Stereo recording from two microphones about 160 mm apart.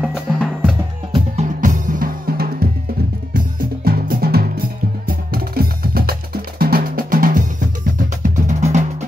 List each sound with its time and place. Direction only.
0.0 s music: 5° right (ahead or behind)
1.3 s drum: 50° right (ahead or behind)
8.2 s music: 50° right (ahead or behind)